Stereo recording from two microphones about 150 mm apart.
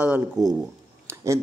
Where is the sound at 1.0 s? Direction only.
20° right (ahead or behind).